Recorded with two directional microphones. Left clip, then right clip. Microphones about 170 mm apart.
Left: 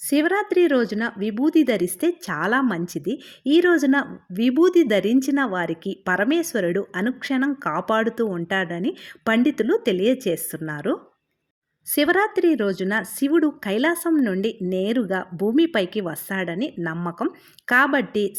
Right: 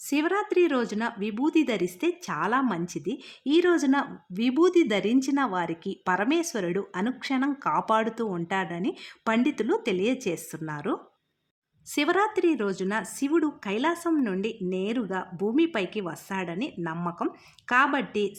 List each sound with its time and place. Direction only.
0.1 s a woman's voice: 25° left (ahead or behind)
11.9 s speech: 20° left (ahead or behind)